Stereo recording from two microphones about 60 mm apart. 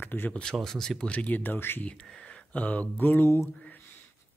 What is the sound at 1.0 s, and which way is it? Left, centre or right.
Speech, left.